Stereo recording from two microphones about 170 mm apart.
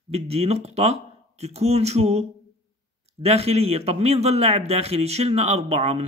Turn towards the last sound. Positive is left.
turn(degrees=-35)  # may be behind; listen again after turning